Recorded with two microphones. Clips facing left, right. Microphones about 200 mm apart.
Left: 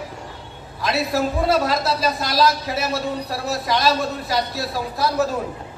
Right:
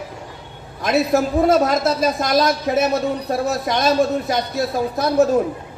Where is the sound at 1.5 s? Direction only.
50° right (ahead or behind).